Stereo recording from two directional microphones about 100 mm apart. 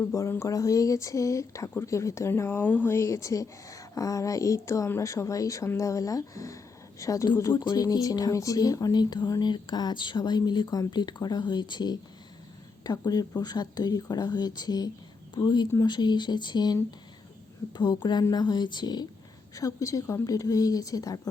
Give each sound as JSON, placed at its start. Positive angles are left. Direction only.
{"t": 0.0, "sound": "speech", "side_deg": 30}
{"t": 7.5, "sound": "speech", "side_deg": 45}
{"t": 17.7, "sound": "speech", "side_deg": 45}
{"t": 19.5, "sound": "speech", "side_deg": 35}